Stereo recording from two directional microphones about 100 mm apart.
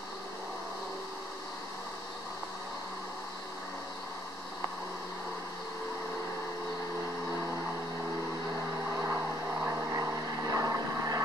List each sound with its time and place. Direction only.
8.9 s vehicle: 20° right (ahead or behind)